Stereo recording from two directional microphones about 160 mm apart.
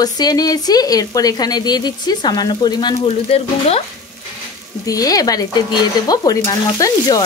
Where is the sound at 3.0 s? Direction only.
40° left (ahead or behind).